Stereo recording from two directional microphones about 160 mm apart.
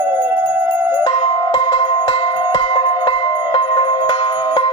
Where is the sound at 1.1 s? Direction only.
30° left (ahead or behind).